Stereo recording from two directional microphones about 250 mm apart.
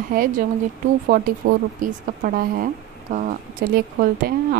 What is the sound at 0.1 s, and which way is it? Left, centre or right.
Speech, right.